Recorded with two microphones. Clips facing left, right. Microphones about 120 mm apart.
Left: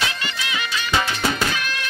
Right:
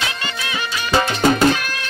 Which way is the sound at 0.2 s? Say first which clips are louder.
Right 2 dB; 35° right (ahead or behind).